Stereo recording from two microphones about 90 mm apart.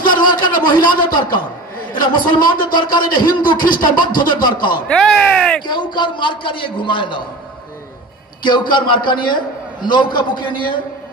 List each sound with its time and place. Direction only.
0.4 s a man's voice: 60° left (ahead or behind)
4.8 s speech: 10° left (ahead or behind)
5.7 s a man's voice: 60° left (ahead or behind)
8.4 s a man's voice: 60° left (ahead or behind)